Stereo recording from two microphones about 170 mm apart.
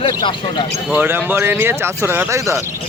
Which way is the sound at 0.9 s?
10° right (ahead or behind).